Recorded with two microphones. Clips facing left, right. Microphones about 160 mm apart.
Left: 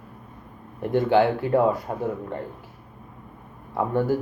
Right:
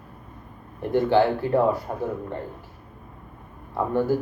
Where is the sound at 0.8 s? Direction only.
15° left (ahead or behind).